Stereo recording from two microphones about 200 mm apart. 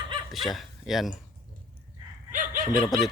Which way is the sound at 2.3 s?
40° right (ahead or behind).